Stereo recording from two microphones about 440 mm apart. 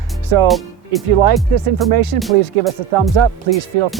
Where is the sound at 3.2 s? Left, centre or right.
Right.